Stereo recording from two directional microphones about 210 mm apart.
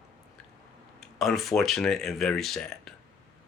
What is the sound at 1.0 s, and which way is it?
Speech, centre (ahead or behind).